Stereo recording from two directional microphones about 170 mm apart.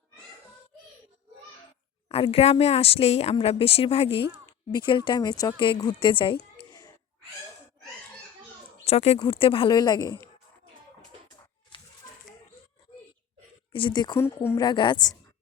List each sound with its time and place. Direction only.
2.0 s a woman's voice: 35° left (ahead or behind)
8.8 s speech: 35° left (ahead or behind); by 10.2 s 20° left (ahead or behind)
13.7 s speech: 25° left (ahead or behind)